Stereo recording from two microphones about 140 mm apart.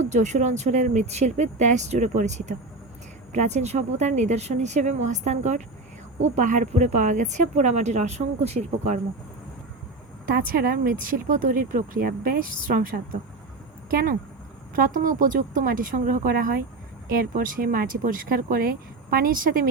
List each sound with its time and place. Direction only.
0.0 s speech: 55° right (ahead or behind)
10.2 s speech: 90° right
14.8 s a woman's voice: 70° right (ahead or behind)